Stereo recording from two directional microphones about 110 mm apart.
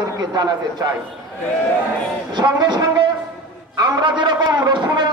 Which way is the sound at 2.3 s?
40° right (ahead or behind).